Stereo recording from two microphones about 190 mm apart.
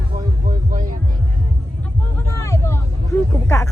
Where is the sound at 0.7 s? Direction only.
45° right (ahead or behind).